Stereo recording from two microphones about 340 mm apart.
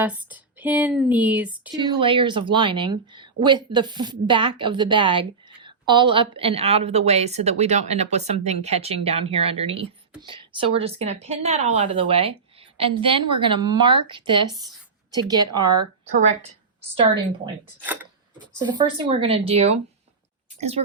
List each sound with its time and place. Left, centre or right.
0.0 s speech: centre
2.0 s speech: centre
17.4 s speech: centre